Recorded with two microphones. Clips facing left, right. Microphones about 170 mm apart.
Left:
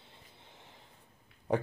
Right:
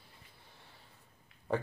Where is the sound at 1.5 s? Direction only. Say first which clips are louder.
Left 3 dB; 15° left (ahead or behind).